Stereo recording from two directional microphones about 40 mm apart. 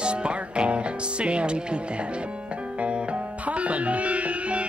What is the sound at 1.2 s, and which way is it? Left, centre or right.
Speech, right.